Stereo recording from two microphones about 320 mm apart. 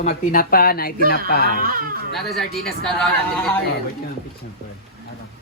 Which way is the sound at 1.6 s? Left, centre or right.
Right.